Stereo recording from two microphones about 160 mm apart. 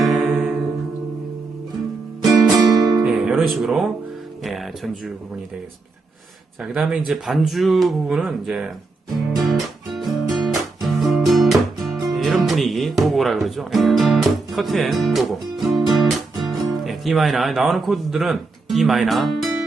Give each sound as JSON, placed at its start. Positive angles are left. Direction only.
{"t": 0.0, "sound": "music", "side_deg": 0}
{"t": 2.6, "sound": "music", "side_deg": -25}
{"t": 3.0, "sound": "music", "side_deg": -5}
{"t": 4.4, "sound": "speech", "side_deg": 0}
{"t": 6.6, "sound": "speech", "side_deg": 0}
{"t": 9.4, "sound": "music", "side_deg": 0}